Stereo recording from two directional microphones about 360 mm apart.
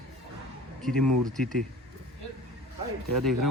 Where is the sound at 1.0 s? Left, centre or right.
Right.